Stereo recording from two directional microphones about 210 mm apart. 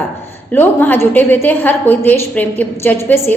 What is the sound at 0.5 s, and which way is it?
A woman's voice, 10° left (ahead or behind).